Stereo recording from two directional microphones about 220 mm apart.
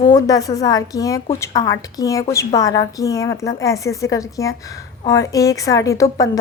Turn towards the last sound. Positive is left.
turn(degrees=15)  # may be behind; listen again after turning